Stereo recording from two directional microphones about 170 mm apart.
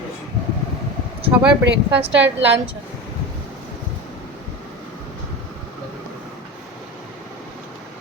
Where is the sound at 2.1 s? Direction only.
90° right.